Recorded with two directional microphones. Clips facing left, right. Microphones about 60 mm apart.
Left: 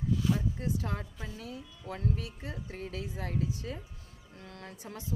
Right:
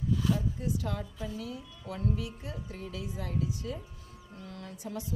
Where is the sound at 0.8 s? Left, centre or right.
Left.